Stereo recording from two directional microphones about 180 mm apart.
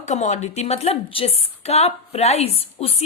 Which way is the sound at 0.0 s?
40° left (ahead or behind).